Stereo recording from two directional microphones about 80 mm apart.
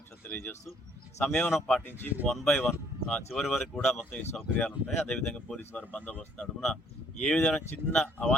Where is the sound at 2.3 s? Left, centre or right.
Centre.